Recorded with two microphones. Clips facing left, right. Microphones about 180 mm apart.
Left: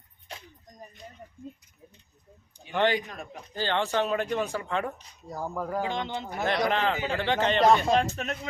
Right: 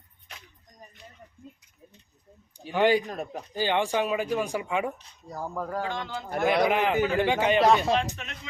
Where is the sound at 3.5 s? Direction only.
15° right (ahead or behind).